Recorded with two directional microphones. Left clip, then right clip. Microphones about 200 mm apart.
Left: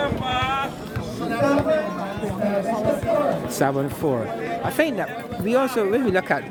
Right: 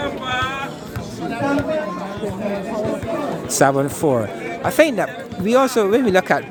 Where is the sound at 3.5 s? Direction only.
35° right (ahead or behind).